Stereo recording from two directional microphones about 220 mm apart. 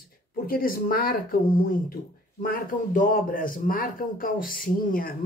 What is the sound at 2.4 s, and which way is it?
A man's voice, 40° left (ahead or behind).